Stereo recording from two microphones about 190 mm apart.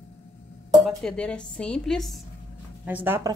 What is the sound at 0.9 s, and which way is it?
A woman's voice, 5° left (ahead or behind).